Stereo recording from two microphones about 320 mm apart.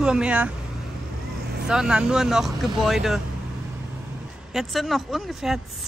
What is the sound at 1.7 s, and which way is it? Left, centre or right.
Speech, centre.